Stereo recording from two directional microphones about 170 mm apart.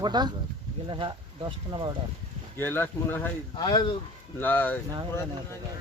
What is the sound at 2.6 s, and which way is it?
Speech, 10° left (ahead or behind).